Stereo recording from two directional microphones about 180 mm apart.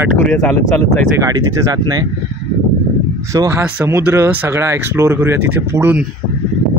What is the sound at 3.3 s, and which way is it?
Speech, 10° right (ahead or behind).